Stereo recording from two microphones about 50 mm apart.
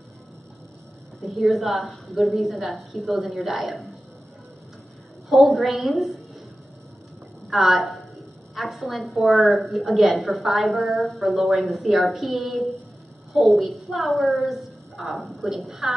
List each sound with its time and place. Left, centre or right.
1.2 s a woman's voice: centre
5.3 s a woman's voice: centre
7.4 s a woman's voice: centre